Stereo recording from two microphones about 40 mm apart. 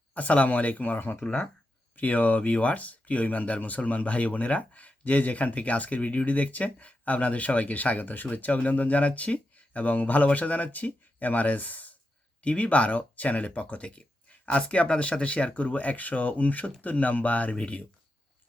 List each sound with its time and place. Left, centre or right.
0.1 s speech: left